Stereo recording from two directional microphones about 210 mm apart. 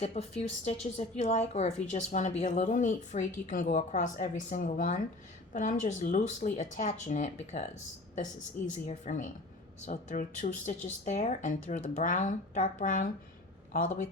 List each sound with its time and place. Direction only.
0.0 s a woman's voice: 30° left (ahead or behind)
8.7 s a woman's voice: 35° left (ahead or behind)